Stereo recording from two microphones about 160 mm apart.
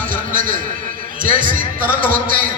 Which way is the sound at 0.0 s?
55° right (ahead or behind).